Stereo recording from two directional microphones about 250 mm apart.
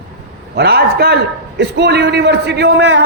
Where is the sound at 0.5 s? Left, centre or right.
Right.